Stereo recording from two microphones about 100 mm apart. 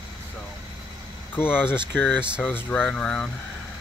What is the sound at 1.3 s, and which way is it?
Speech, 20° left (ahead or behind).